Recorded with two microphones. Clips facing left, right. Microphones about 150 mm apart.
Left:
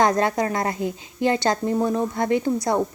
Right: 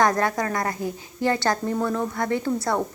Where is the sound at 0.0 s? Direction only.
20° left (ahead or behind).